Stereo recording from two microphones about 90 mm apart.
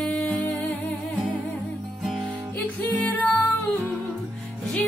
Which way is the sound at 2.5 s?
20° left (ahead or behind).